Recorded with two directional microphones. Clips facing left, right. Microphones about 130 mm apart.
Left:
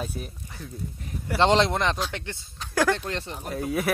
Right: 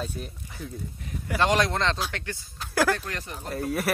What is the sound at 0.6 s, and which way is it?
Speech, centre (ahead or behind).